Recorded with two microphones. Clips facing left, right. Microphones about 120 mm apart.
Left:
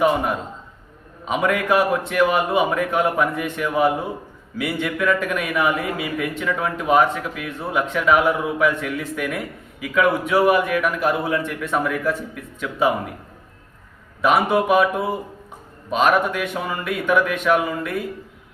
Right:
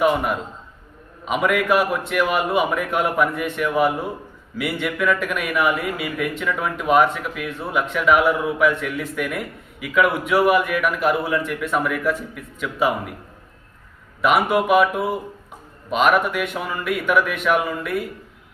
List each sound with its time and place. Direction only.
0.0 s a man's voice: 25° left (ahead or behind)
11.1 s a man's voice: 25° left (ahead or behind)
14.2 s a man's voice: 30° left (ahead or behind)
16.1 s a man's voice: 30° left (ahead or behind)